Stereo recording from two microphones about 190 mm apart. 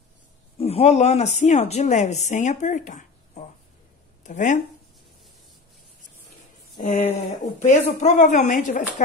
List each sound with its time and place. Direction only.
0.6 s speech: 30° left (ahead or behind)
6.8 s speech: 35° left (ahead or behind)